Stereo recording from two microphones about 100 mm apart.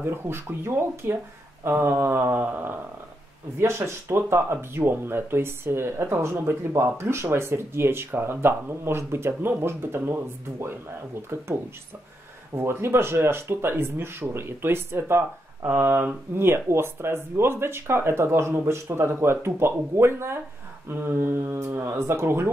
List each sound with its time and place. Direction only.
0.0 s speech: 25° right (ahead or behind)
12.5 s speech: 25° right (ahead or behind)